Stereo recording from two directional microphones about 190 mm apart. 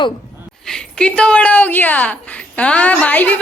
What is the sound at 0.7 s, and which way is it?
A woman's voice, 5° left (ahead or behind).